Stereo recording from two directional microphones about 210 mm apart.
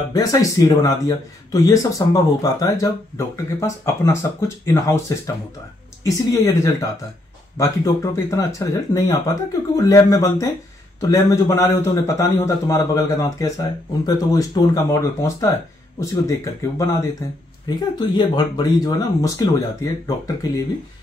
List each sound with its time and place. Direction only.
0.1 s speech: 15° left (ahead or behind)